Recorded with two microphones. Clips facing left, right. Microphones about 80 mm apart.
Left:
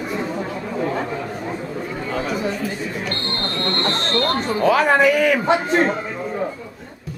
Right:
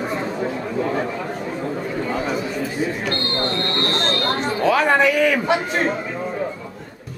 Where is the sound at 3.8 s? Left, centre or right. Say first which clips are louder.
Left 3 dB; centre.